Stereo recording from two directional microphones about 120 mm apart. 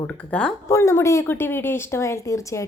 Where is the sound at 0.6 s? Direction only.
25° left (ahead or behind).